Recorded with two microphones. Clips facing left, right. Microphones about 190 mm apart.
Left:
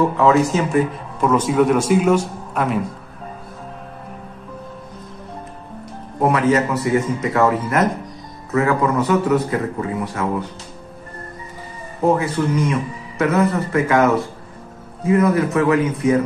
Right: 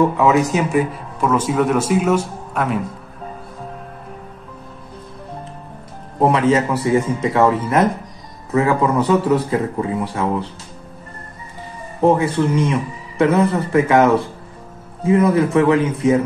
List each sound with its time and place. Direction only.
0.2 s speech: 15° right (ahead or behind)
1.2 s speech: 5° right (ahead or behind)
6.2 s a man's voice: 30° right (ahead or behind)
12.0 s a man's voice: 30° right (ahead or behind)